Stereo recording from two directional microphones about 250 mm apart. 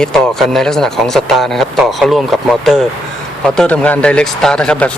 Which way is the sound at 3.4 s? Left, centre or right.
Centre.